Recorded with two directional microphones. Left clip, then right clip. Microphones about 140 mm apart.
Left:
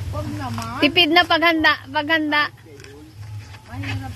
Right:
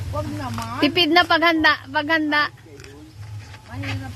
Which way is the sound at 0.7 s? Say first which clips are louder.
Left 2 dB; 20° right (ahead or behind).